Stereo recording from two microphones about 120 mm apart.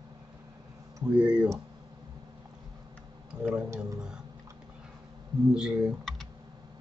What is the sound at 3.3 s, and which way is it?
Speech, 5° right (ahead or behind).